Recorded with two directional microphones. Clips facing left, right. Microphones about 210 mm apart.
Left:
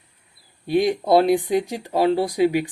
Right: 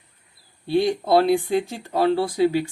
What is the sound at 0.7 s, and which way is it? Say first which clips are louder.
Speech: left 1 dB; 15° left (ahead or behind).